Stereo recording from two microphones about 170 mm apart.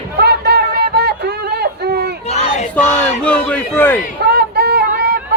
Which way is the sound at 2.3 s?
40° left (ahead or behind).